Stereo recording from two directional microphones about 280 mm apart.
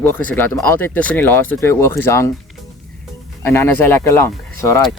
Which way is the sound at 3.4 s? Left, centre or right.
Centre.